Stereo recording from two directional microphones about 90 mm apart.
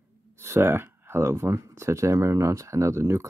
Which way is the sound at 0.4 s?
25° right (ahead or behind).